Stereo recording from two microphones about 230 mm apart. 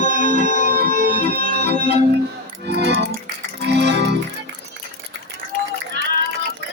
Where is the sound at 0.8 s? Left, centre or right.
Right.